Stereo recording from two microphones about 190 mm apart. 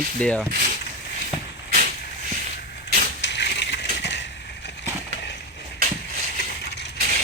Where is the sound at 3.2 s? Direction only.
65° left (ahead or behind).